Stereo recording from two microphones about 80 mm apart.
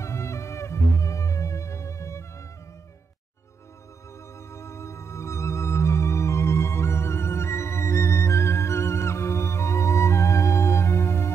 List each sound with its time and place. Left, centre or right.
0.0 s music: left
4.5 s music: left